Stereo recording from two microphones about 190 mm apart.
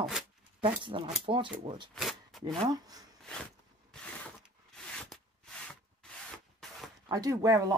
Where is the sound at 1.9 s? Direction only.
Centre (ahead or behind).